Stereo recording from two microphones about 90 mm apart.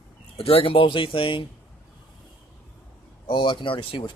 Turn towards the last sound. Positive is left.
turn(degrees=70)  # may be behind; listen again after turning